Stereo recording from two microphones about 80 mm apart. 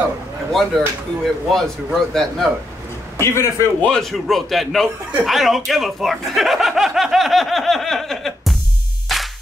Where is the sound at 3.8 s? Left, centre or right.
Centre.